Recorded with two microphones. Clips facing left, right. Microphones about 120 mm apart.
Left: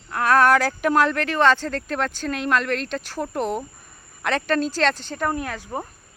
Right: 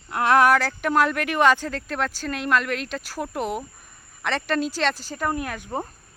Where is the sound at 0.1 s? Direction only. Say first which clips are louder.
Even; 20° right (ahead or behind).